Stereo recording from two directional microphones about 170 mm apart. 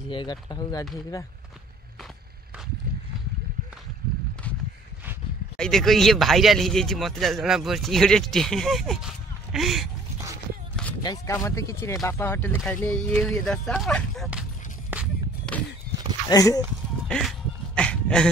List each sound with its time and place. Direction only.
0.1 s speech: 25° left (ahead or behind)
5.6 s speech: centre (ahead or behind)
11.0 s speech: 20° left (ahead or behind); by 14.4 s centre (ahead or behind)
15.5 s a sound: 5° left (ahead or behind)
16.3 s speech: 20° left (ahead or behind)
17.1 s a sound: centre (ahead or behind)